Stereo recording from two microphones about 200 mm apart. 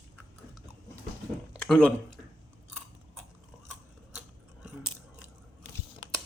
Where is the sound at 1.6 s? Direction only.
5° left (ahead or behind).